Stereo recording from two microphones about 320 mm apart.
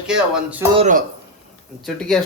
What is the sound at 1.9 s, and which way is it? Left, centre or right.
Speech, centre.